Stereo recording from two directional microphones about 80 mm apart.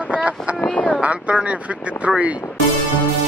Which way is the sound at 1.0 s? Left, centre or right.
Centre.